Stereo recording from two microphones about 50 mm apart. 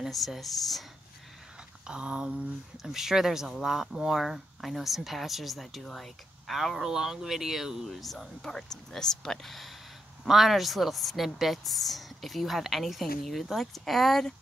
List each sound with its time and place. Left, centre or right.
0.1 s speech: centre
1.9 s speech: right
2.8 s speech: centre